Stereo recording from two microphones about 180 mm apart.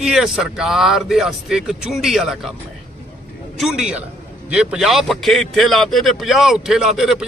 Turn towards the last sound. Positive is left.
turn(degrees=0)  # may be behind; listen again after turning